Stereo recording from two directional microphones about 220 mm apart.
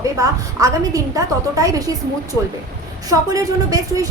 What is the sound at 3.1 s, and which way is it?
Speech, 15° right (ahead or behind).